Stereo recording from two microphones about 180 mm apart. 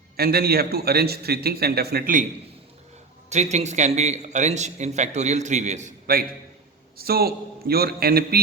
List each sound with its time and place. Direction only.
0.2 s a man's voice: 60° right (ahead or behind)
3.2 s a man's voice: 40° right (ahead or behind)
6.9 s a man's voice: 60° right (ahead or behind)